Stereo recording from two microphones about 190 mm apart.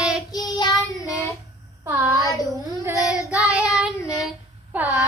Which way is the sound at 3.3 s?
5° right (ahead or behind).